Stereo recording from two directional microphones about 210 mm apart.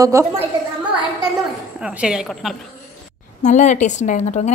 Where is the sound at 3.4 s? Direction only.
35° left (ahead or behind).